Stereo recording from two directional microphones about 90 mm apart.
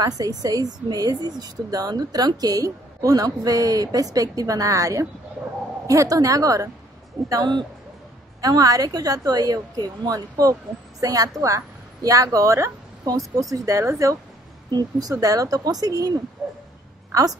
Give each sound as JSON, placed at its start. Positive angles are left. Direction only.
{"t": 0.0, "sound": "a woman's voice", "side_deg": -45}
{"t": 14.7, "sound": "a woman's voice", "side_deg": -45}